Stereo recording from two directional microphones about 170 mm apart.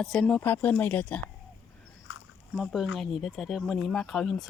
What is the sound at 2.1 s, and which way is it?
Dog, 90° left.